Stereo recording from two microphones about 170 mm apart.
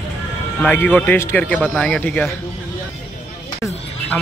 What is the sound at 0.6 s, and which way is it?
Speech, 10° left (ahead or behind).